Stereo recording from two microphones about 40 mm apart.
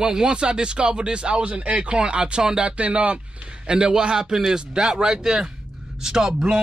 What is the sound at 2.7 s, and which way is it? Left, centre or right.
Speech, right.